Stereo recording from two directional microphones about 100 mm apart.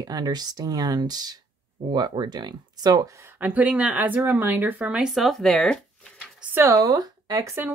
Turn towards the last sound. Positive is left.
turn(degrees=-35)  # may be behind; listen again after turning